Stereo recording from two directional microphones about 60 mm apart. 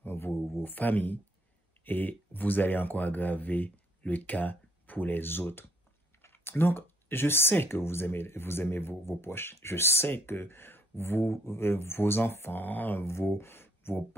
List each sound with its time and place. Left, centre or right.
0.0 s a sound: left
0.3 s speech: left
0.7 s speech: left
13.0 s speech: left